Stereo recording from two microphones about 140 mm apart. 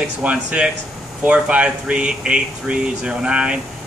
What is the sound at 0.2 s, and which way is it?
Speech, 10° right (ahead or behind).